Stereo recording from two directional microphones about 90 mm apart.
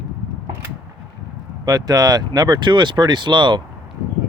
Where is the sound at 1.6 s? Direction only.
45° right (ahead or behind).